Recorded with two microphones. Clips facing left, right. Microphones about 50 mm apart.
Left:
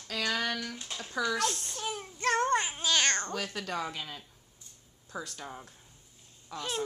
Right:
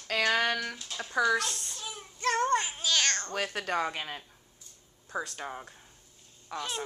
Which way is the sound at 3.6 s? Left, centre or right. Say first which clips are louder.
Right 4 dB; right.